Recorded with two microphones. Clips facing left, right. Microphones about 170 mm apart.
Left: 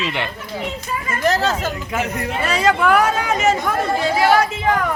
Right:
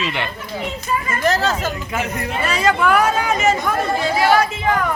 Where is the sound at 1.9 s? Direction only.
70° left (ahead or behind).